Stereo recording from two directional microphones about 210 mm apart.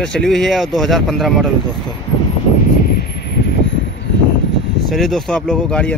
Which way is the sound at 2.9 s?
45° left (ahead or behind).